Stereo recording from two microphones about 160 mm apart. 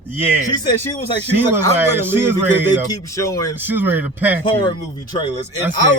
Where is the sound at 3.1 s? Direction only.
20° left (ahead or behind).